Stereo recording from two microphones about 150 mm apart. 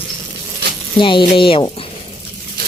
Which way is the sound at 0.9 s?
35° left (ahead or behind).